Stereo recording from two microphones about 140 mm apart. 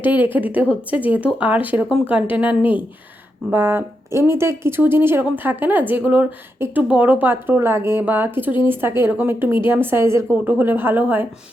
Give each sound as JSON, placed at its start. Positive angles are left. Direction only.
{"t": 0.0, "sound": "speech", "side_deg": -15}